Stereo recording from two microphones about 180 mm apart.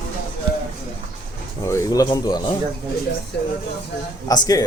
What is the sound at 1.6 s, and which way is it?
Speech, 15° left (ahead or behind).